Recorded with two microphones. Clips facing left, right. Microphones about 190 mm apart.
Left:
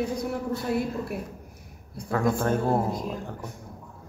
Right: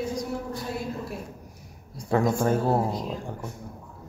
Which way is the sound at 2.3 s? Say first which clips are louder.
Right 1 dB; 5° right (ahead or behind).